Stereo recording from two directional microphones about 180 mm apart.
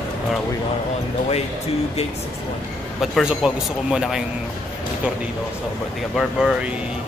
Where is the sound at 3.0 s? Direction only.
Centre (ahead or behind).